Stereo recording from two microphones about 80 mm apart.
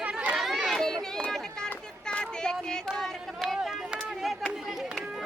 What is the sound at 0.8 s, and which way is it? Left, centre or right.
Run, centre.